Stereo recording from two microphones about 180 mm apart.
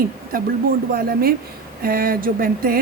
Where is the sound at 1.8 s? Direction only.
55° right (ahead or behind).